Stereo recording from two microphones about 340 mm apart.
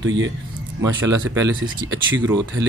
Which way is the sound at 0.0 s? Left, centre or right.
Right.